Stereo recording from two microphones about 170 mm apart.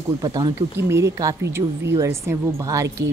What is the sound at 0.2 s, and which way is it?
Speech, 20° right (ahead or behind).